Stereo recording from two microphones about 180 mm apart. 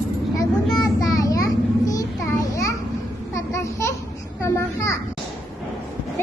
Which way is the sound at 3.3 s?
15° left (ahead or behind).